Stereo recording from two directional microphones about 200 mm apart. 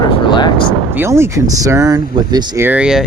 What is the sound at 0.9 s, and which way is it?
Speech, 15° right (ahead or behind).